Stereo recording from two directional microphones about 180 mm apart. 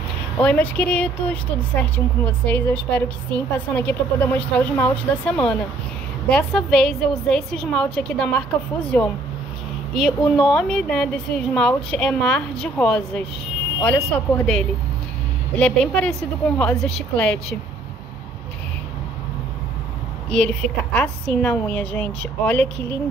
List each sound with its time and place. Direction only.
0.4 s a woman's voice: 10° left (ahead or behind)
20.3 s speech: 5° left (ahead or behind)